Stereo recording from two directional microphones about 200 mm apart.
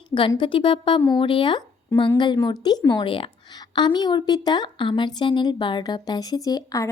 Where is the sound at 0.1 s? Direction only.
25° left (ahead or behind).